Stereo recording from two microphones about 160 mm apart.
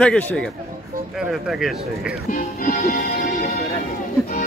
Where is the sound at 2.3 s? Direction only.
60° left (ahead or behind).